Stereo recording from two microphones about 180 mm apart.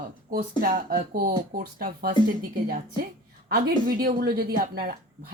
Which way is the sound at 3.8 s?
55° right (ahead or behind).